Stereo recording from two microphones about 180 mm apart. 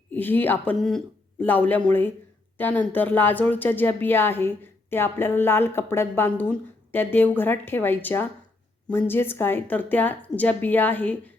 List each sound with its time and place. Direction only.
0.1 s speech: 10° left (ahead or behind)